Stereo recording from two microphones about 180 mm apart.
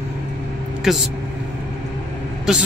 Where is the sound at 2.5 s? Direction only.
Centre (ahead or behind).